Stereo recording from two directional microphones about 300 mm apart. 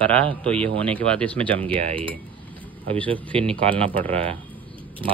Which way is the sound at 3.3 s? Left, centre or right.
Centre.